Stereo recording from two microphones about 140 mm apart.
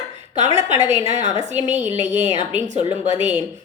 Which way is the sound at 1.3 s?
35° left (ahead or behind).